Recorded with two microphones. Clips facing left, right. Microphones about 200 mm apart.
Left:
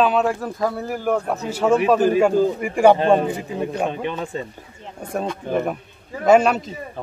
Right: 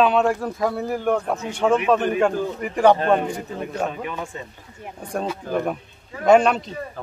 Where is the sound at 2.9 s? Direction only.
25° left (ahead or behind).